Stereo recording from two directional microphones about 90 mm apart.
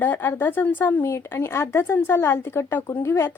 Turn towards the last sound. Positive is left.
turn(degrees=30)  # may be behind; listen again after turning